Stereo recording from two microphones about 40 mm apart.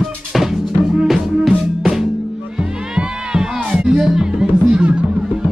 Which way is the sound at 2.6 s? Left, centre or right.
Centre.